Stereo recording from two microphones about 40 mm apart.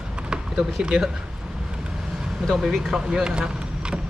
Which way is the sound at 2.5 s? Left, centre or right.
Centre.